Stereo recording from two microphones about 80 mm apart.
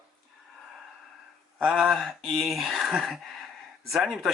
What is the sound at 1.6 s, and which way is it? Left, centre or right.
Speech, centre.